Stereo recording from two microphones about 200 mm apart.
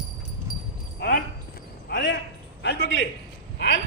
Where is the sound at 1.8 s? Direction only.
60° left (ahead or behind).